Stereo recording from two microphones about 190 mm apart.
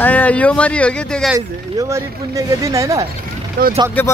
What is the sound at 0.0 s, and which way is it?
Speech, 10° left (ahead or behind).